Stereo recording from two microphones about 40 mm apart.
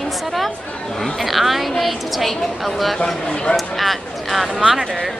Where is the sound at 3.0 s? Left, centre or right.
Centre.